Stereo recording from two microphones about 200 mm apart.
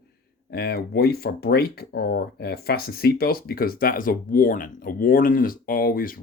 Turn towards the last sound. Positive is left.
turn(degrees=45)  # may be behind; listen again after turning